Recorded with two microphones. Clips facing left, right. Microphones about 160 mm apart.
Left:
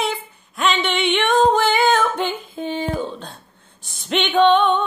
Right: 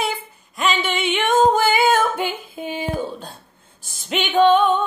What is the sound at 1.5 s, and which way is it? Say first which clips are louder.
Female singing: even; 5° right (ahead or behind).